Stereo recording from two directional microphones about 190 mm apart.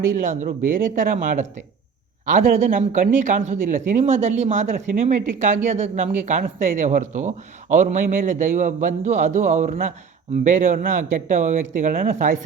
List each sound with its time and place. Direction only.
0.2 s speech: 40° right (ahead or behind)